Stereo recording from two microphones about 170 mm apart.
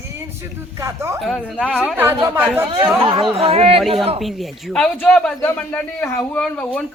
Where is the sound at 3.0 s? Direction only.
30° right (ahead or behind).